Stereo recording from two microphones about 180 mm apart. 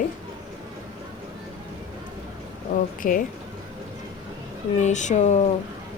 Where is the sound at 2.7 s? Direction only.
50° left (ahead or behind).